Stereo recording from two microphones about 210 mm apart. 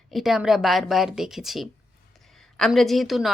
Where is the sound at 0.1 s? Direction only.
Centre (ahead or behind).